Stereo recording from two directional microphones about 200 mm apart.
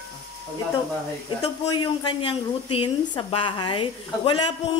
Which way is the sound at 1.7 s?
20° left (ahead or behind).